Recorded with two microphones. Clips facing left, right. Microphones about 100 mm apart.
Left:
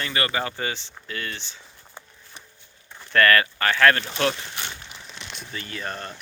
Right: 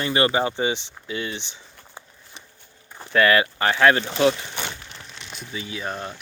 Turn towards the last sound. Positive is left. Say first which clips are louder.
# right 2 dB
turn(degrees=-5)  # may be behind; listen again after turning